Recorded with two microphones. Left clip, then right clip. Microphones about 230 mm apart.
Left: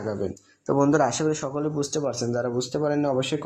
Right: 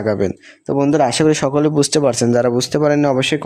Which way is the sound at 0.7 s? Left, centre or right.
Right.